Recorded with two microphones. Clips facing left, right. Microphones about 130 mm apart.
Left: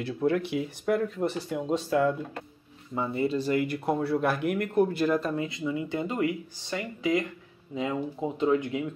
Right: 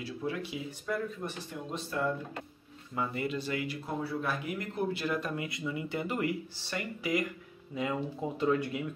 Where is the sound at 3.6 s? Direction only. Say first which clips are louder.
Left 8 dB; 70° left (ahead or behind); by 5.3 s 40° left (ahead or behind).